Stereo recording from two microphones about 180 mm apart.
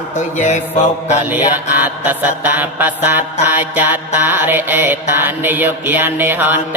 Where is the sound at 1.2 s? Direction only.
10° right (ahead or behind).